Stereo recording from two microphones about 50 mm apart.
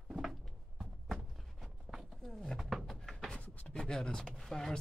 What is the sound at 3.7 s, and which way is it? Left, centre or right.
Speech, centre.